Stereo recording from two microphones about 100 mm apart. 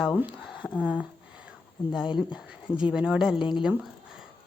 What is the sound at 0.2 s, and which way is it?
Speech, 10° right (ahead or behind).